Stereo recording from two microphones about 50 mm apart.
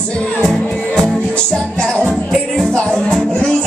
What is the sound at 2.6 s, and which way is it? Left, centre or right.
Music, centre.